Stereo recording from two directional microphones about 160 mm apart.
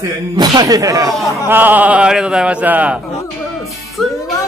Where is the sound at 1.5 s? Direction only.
10° right (ahead or behind).